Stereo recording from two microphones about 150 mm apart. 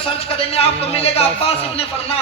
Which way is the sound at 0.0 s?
40° left (ahead or behind).